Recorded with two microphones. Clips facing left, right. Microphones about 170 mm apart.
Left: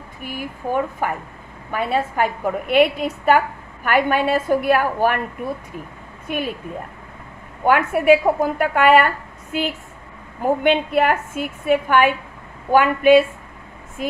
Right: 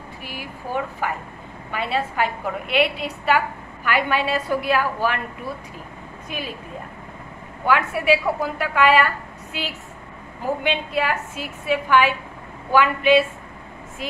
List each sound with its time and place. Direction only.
0.2 s a woman's voice: 50° left (ahead or behind)
6.2 s a woman's voice: 55° left (ahead or behind)
7.6 s a woman's voice: 50° left (ahead or behind)